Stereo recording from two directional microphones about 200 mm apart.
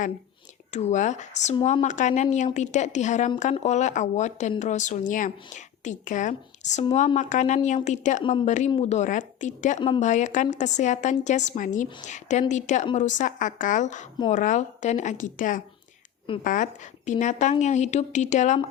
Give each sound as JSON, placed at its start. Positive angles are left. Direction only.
{"t": 0.7, "sound": "a woman's voice", "side_deg": 35}